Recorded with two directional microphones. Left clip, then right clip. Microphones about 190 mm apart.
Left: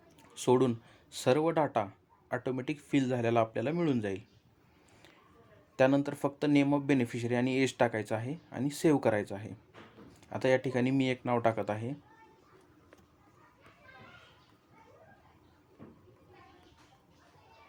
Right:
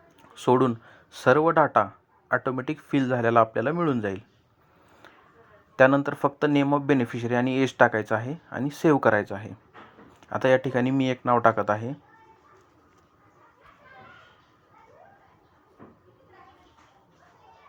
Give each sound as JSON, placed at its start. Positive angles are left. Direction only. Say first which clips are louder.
{"t": 0.2, "sound": "speech", "louder": "right 6 dB", "side_deg": -10}
{"t": 5.7, "sound": "speech", "louder": "right 8 dB", "side_deg": -10}